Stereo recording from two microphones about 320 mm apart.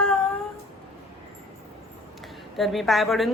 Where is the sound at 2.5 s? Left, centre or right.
Centre.